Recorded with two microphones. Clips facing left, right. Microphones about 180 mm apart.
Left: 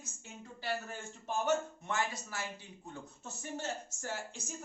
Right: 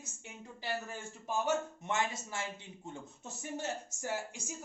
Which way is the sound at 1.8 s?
20° right (ahead or behind).